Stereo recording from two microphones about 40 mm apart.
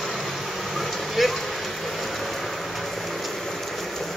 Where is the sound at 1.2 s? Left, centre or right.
Centre.